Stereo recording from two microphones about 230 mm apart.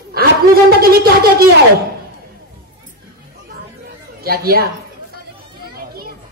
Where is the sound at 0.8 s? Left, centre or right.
Right.